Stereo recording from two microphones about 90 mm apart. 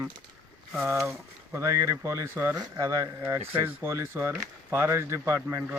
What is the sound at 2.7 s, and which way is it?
A man's voice, 35° right (ahead or behind).